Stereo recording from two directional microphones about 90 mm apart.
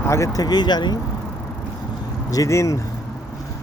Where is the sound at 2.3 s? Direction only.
35° left (ahead or behind).